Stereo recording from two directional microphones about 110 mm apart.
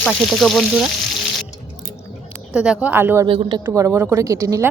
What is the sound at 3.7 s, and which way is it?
Speech, 20° right (ahead or behind).